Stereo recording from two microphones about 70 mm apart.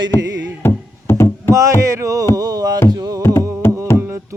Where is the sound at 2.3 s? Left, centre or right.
Right.